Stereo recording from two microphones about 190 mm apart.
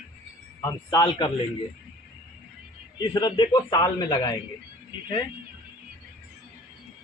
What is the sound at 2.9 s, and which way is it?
A man's voice, 20° left (ahead or behind).